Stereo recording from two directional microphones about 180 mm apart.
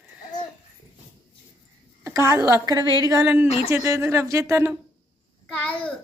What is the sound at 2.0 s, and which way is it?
A woman's voice, 15° right (ahead or behind).